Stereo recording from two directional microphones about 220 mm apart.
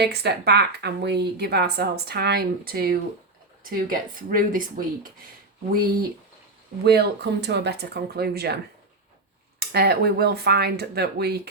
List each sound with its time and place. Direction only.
0.0 s a woman's voice: 50° right (ahead or behind)
5.7 s a woman's voice: 40° right (ahead or behind)
9.6 s a woman's voice: 45° right (ahead or behind)